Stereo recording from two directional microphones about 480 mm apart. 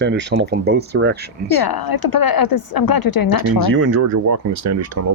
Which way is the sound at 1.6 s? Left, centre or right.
Left.